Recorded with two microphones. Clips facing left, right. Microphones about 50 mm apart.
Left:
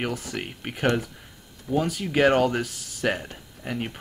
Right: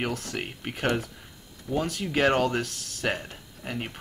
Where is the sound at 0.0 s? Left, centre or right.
Centre.